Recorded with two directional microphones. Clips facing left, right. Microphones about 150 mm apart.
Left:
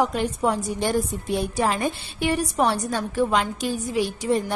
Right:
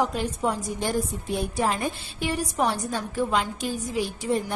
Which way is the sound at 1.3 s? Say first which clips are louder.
Left 2 dB; 85° left.